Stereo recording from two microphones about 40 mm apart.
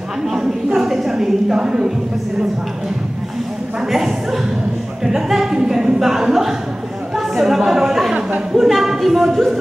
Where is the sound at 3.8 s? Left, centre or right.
Centre.